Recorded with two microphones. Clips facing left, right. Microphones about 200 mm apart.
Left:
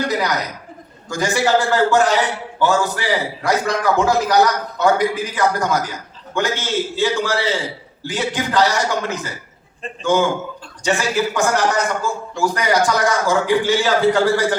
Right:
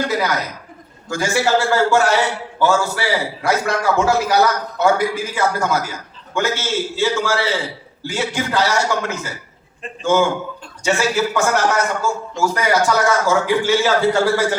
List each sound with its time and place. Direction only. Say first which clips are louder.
0.1 s a man's voice: even; 15° left (ahead or behind)